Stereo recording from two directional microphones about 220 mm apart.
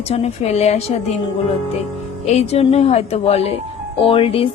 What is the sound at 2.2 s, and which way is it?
Speech, 30° left (ahead or behind).